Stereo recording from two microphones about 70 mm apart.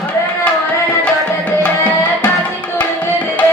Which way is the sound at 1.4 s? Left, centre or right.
Left.